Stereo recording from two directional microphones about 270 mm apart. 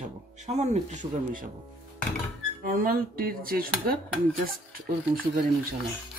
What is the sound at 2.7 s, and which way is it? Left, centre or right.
Speech, right.